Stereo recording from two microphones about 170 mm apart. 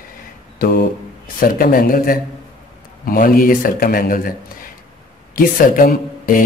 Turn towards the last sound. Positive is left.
turn(degrees=55)  # may be behind; listen again after turning